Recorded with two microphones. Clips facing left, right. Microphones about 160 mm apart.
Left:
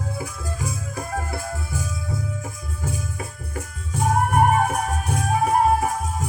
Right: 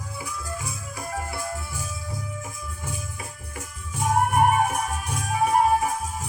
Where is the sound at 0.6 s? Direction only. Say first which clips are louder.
Left 4 dB; 45° left (ahead or behind).